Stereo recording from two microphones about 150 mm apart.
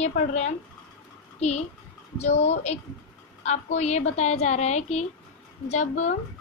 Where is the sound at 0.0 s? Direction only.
45° left (ahead or behind).